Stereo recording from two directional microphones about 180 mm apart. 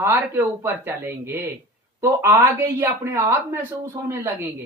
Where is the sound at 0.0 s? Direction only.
15° right (ahead or behind).